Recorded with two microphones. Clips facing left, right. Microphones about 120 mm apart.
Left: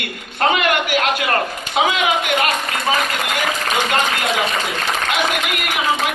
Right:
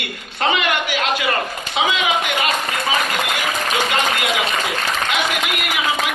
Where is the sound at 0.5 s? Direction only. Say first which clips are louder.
Left 2 dB; 50° left (ahead or behind).